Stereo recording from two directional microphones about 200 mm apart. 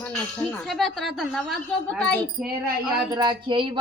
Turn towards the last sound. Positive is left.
turn(degrees=-25)  # may be behind; listen again after turning